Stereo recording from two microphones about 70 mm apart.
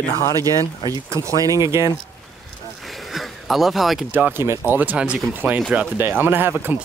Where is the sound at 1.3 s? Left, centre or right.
Right.